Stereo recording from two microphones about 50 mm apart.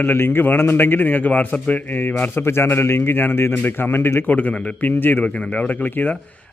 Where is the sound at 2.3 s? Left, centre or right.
Left.